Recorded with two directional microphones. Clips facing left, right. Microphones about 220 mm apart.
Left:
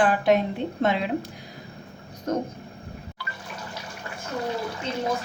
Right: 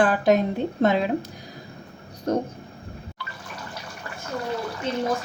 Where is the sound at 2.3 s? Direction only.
35° right (ahead or behind).